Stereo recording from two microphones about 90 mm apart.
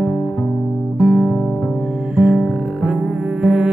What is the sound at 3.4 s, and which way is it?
Double bass, 10° right (ahead or behind).